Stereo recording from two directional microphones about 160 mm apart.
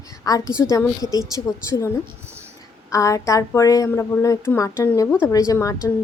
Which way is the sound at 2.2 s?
15° right (ahead or behind).